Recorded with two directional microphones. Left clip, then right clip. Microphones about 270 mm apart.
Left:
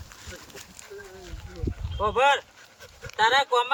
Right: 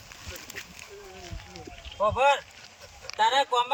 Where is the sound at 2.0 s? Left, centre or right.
Centre.